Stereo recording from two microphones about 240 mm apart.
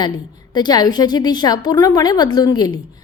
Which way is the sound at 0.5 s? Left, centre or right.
Centre.